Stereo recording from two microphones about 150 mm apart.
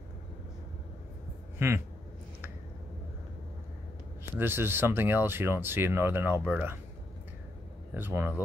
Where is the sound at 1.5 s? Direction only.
15° right (ahead or behind).